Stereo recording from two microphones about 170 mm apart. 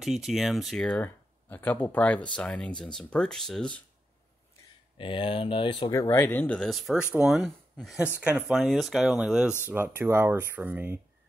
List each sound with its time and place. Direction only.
0.0 s speech: centre (ahead or behind)
4.9 s speech: 30° left (ahead or behind)
5.9 s speech: 20° left (ahead or behind); by 11.0 s 10° right (ahead or behind)